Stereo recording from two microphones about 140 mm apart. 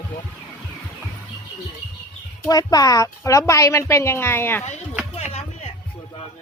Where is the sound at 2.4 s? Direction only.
25° left (ahead or behind).